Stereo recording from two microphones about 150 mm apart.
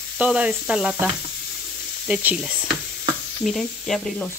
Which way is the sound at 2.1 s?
10° right (ahead or behind).